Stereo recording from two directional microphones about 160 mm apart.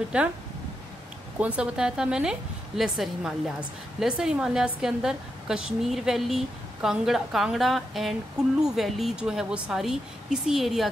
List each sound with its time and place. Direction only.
0.1 s speech: 5° right (ahead or behind)
1.4 s a woman's voice: 5° right (ahead or behind)